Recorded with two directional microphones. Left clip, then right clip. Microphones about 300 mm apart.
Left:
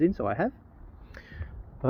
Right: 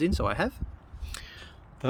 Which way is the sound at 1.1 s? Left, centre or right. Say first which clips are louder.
Right 4 dB; centre.